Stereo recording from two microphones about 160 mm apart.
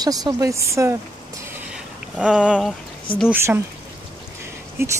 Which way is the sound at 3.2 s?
15° right (ahead or behind).